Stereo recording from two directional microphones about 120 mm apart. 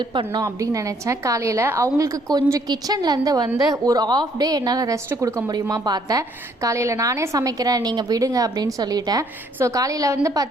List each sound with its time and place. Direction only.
0.1 s a woman's voice: 40° right (ahead or behind)
0.4 s a woman's voice: 25° right (ahead or behind)